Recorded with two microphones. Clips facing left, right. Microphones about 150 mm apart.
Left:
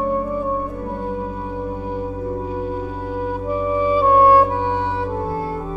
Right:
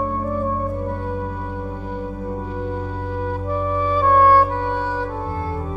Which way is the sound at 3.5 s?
10° left (ahead or behind).